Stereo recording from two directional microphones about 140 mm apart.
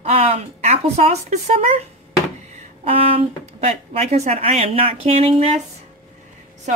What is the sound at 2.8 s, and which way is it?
A woman's voice, 45° right (ahead or behind).